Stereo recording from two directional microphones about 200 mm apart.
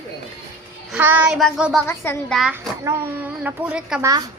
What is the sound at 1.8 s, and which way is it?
Speech, 10° left (ahead or behind).